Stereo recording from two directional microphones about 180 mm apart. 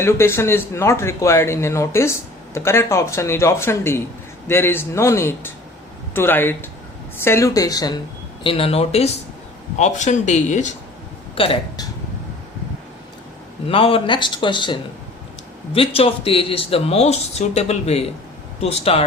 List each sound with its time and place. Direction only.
0.0 s speech: 15° left (ahead or behind)
8.4 s speech: 30° left (ahead or behind)
11.3 s speech: 30° left (ahead or behind)
13.7 s speech: 30° left (ahead or behind)